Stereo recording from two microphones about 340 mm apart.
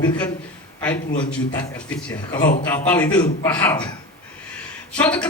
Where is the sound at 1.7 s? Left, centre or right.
Centre.